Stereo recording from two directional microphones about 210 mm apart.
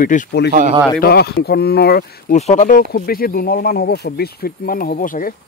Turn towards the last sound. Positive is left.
turn(degrees=40)  # may be behind; listen again after turning